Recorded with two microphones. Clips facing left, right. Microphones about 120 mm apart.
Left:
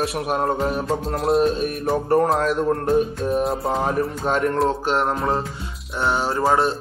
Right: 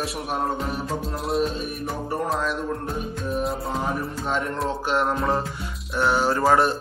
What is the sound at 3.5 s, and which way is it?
A man's voice, 65° left (ahead or behind).